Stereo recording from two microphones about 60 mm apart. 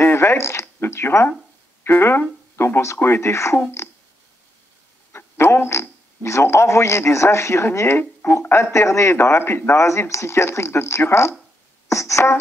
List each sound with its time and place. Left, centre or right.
0.0 s a sound: left
1.9 s speech: left
5.1 s speech: left
8.0 s speech: left
8.7 s speech: left
9.1 s speech: left
9.8 s speech: left